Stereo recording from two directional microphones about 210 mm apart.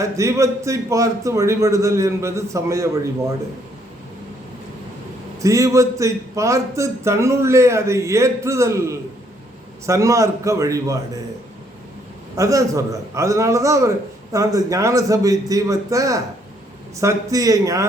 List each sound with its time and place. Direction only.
0.0 s a man's voice: 15° right (ahead or behind)
5.4 s a man's voice: 15° right (ahead or behind)
12.4 s a man's voice: 15° right (ahead or behind)